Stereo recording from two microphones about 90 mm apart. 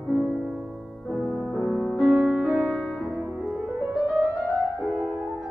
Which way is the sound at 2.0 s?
10° right (ahead or behind).